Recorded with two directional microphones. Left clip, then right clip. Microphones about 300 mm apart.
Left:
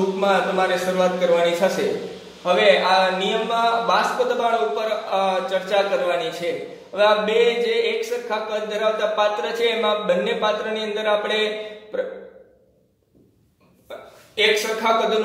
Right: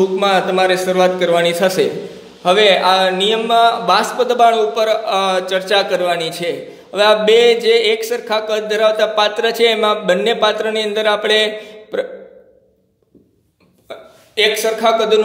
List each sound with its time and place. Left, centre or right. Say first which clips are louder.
0.2 s a man's voice: right 2 dB; right
14.3 s speech: right 4 dB; right